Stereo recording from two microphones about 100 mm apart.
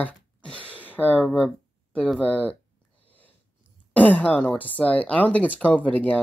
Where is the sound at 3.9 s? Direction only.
15° left (ahead or behind).